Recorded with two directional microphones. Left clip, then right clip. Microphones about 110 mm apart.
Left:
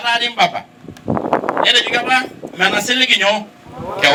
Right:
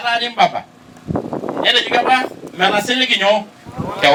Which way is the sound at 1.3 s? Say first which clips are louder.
Left 2 dB; 35° left (ahead or behind).